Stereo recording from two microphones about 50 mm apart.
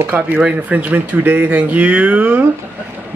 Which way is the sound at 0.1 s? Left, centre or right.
Right.